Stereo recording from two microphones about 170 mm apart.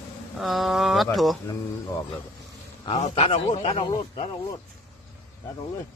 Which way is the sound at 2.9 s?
35° left (ahead or behind).